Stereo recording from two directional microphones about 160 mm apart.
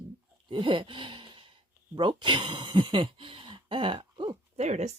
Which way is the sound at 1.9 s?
25° right (ahead or behind).